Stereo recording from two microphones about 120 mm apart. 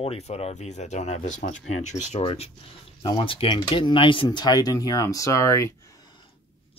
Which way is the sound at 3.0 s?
45° left (ahead or behind).